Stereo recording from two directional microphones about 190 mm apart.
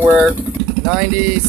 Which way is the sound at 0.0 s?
5° right (ahead or behind).